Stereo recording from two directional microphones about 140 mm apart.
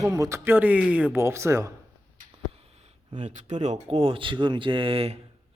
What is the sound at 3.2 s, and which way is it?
Speech, 60° right (ahead or behind).